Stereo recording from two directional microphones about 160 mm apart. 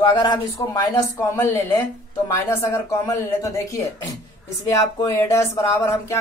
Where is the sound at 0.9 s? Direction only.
20° left (ahead or behind).